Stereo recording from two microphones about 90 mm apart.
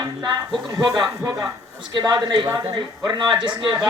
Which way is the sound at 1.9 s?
50° right (ahead or behind).